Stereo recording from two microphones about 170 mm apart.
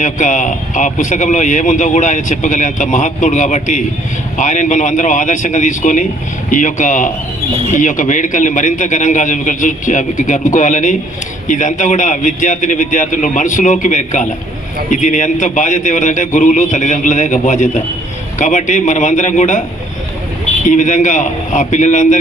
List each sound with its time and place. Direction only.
0.0 s a man's voice: 45° left (ahead or behind)
20.7 s a man's voice: 45° left (ahead or behind)